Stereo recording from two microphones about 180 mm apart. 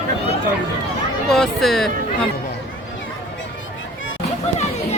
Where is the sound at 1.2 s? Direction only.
Centre (ahead or behind).